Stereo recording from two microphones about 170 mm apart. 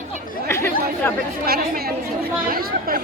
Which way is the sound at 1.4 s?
60° right (ahead or behind).